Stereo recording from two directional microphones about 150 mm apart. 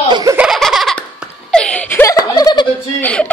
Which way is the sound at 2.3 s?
25° left (ahead or behind).